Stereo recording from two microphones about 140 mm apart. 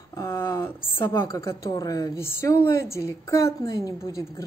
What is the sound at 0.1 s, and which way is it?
A woman's voice, 20° left (ahead or behind).